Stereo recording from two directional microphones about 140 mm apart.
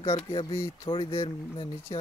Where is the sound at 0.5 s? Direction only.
20° left (ahead or behind).